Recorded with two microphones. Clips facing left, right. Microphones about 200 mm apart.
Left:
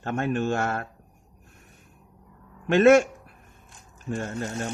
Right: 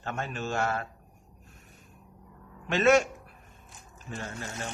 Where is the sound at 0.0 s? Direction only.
55° left (ahead or behind).